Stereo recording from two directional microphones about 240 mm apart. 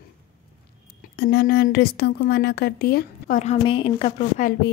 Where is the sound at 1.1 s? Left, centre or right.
Left.